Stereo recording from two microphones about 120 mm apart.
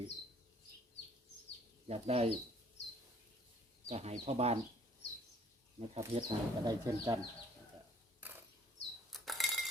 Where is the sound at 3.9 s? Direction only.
60° right (ahead or behind).